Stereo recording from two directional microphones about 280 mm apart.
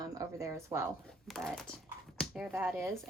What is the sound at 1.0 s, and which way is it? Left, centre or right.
A woman's voice, centre.